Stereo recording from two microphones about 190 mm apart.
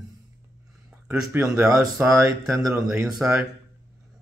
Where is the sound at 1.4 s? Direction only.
15° right (ahead or behind).